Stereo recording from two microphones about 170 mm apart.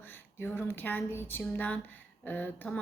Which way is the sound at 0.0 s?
10° left (ahead or behind).